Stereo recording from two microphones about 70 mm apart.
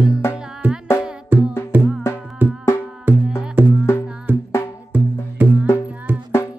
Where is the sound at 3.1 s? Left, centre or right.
Right.